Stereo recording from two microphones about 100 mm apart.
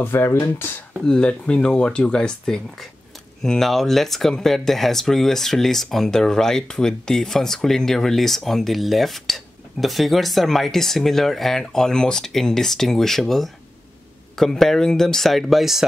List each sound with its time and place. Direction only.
0.0 s speech: 20° left (ahead or behind)
1.0 s speech: 10° left (ahead or behind)